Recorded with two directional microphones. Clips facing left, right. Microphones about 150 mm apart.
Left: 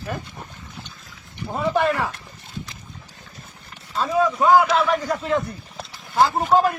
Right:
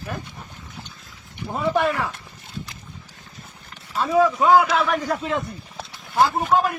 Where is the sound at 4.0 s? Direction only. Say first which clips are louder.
Right 2 dB; centre (ahead or behind).